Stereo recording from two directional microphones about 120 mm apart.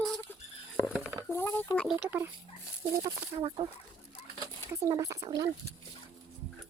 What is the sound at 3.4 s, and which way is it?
Speech, 45° right (ahead or behind).